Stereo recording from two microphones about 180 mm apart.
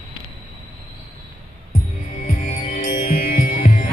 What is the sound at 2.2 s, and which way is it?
Music, 45° left (ahead or behind).